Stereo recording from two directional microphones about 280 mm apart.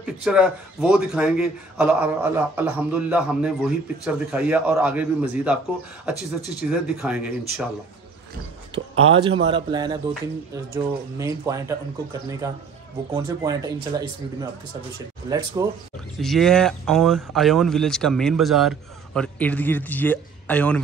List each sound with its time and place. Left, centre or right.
0.0 s a man's voice: centre
6.1 s speech: left
6.7 s a man's voice: centre
8.7 s speech: centre
13.1 s speech: centre
15.2 s speech: centre
16.2 s a man's voice: centre